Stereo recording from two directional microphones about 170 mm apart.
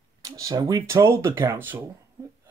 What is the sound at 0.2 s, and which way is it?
Speech, 20° right (ahead or behind).